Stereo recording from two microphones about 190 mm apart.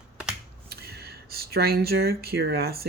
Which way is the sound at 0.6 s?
55° right (ahead or behind).